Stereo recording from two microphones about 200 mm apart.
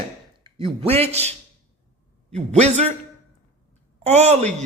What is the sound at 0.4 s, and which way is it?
Speech, 25° right (ahead or behind).